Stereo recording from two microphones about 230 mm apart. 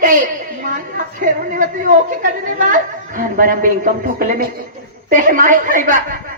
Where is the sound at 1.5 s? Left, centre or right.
Right.